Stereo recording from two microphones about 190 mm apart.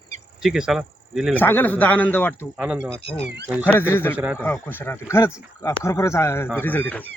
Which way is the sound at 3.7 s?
10° left (ahead or behind).